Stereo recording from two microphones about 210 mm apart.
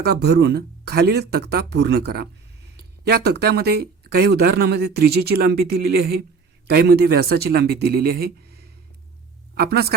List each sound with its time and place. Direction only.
0.0 s speech: 50° right (ahead or behind)